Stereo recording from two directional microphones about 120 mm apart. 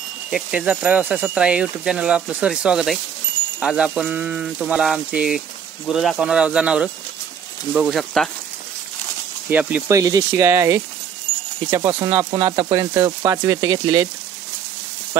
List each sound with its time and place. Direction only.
0.3 s speech: 5° right (ahead or behind)
7.9 s speech: 5° left (ahead or behind)
9.5 s speech: 10° right (ahead or behind)
9.8 s speech: 30° right (ahead or behind)